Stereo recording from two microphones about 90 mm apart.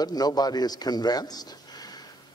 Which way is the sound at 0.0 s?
50° left (ahead or behind).